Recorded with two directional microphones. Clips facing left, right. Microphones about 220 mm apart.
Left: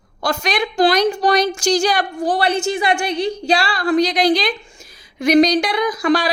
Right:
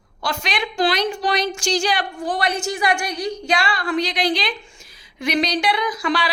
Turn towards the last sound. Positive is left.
turn(degrees=40)  # may be behind; listen again after turning